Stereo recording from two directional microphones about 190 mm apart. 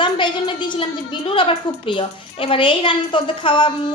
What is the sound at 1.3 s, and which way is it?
A woman's voice, 25° left (ahead or behind).